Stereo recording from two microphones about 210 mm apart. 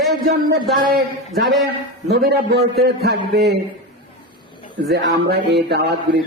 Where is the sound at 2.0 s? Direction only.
50° right (ahead or behind).